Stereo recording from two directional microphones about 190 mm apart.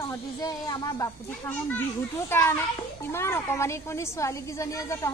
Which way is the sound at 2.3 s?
10° left (ahead or behind).